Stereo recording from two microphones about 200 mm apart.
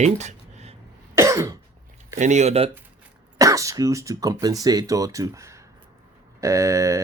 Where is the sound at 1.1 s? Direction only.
15° right (ahead or behind).